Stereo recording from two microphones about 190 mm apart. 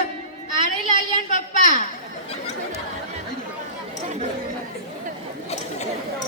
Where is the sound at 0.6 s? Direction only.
45° left (ahead or behind).